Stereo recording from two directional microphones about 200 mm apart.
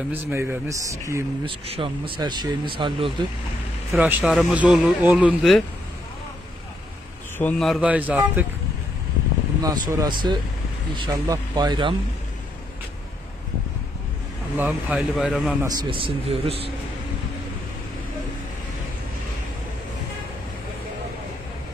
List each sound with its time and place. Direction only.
0.1 s speech: 10° right (ahead or behind)
1.7 s speech: 25° right (ahead or behind)
3.9 s speech: 5° right (ahead or behind)
7.3 s speech: 5° left (ahead or behind)
9.6 s speech: 20° right (ahead or behind)
14.6 s speech: 5° right (ahead or behind)
15.6 s speech: 20° right (ahead or behind)